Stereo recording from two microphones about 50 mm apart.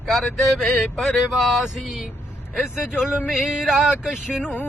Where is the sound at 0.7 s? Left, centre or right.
Centre.